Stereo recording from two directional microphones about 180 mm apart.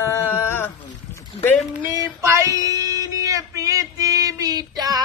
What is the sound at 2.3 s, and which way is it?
Speech, 15° right (ahead or behind).